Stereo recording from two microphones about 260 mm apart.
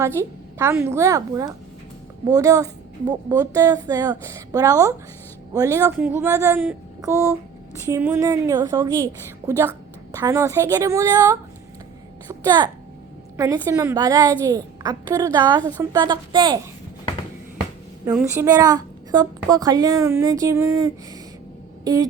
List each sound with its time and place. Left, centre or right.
0.0 s a woman's voice: centre
10.1 s a woman's voice: centre
18.0 s a woman's voice: centre